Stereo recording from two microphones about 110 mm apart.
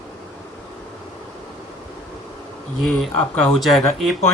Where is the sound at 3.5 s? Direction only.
Centre (ahead or behind).